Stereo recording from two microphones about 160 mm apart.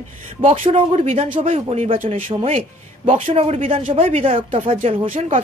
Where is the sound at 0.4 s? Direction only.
35° right (ahead or behind).